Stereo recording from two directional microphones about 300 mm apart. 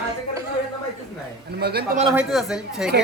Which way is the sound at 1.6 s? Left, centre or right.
Right.